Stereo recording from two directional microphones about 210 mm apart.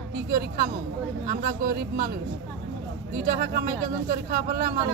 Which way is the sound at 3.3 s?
45° right (ahead or behind).